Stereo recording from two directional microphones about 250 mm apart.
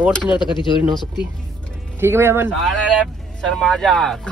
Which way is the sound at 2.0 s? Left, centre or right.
Centre.